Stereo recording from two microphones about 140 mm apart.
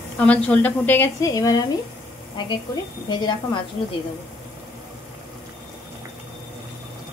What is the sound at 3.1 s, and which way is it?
Speech, 30° left (ahead or behind).